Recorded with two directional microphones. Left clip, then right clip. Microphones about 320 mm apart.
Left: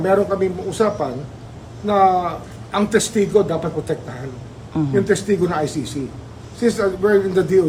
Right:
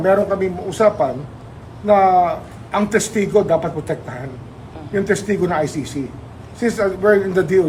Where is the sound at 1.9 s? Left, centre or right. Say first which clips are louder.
Right 3 dB; centre.